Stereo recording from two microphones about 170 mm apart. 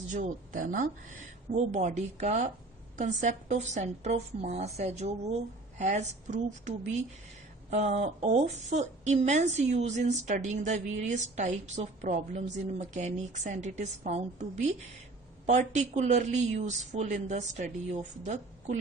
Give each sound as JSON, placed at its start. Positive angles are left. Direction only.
{"t": 0.1, "sound": "a woman's voice", "side_deg": -50}